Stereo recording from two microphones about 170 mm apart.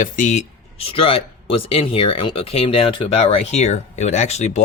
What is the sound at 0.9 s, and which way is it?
Speech, 35° left (ahead or behind).